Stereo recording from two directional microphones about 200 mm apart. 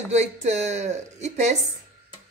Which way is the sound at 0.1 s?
35° right (ahead or behind).